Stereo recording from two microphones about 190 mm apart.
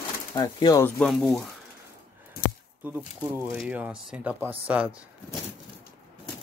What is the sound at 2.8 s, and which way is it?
Speech, 10° right (ahead or behind).